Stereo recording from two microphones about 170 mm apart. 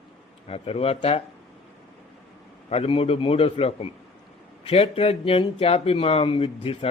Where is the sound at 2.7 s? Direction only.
35° left (ahead or behind).